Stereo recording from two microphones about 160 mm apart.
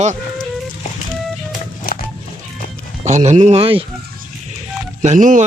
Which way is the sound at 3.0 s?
50° right (ahead or behind).